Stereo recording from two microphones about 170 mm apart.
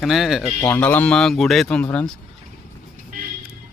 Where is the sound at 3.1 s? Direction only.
55° right (ahead or behind).